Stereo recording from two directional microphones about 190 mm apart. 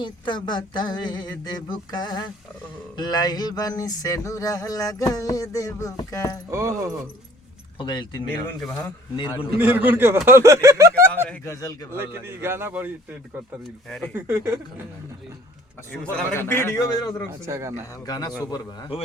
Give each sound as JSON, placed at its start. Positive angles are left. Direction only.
{"t": 0.0, "sound": "a sound", "side_deg": 25}
{"t": 6.5, "sound": "a man's voice", "side_deg": -15}
{"t": 7.8, "sound": "a sound", "side_deg": 25}
{"t": 8.4, "sound": "a man's voice", "side_deg": 10}
{"t": 9.1, "sound": "a sound", "side_deg": 25}
{"t": 9.6, "sound": "a man's voice", "side_deg": -10}
{"t": 11.3, "sound": "a man's voice", "side_deg": 15}
{"t": 11.9, "sound": "a man's voice", "side_deg": -10}
{"t": 14.1, "sound": "a man's voice", "side_deg": -10}
{"t": 15.9, "sound": "a man's voice", "side_deg": 10}
{"t": 17.4, "sound": "a man's voice", "side_deg": -15}
{"t": 18.0, "sound": "a sound", "side_deg": 20}